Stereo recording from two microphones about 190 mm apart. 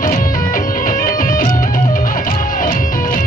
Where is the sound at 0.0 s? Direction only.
45° left (ahead or behind).